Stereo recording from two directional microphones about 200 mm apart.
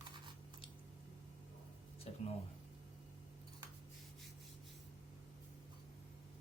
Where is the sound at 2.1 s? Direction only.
30° left (ahead or behind).